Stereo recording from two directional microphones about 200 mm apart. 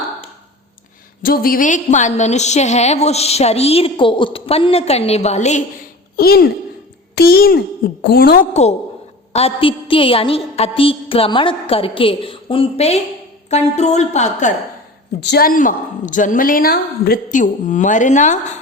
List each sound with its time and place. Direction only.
1.2 s a woman's voice: 45° left (ahead or behind)
6.1 s a woman's voice: 50° left (ahead or behind)
9.3 s a woman's voice: 30° left (ahead or behind)
15.2 s a woman's voice: 55° left (ahead or behind); by 18.5 s 40° left (ahead or behind)